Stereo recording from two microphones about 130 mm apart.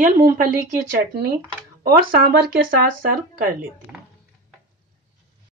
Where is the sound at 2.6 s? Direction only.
90° right.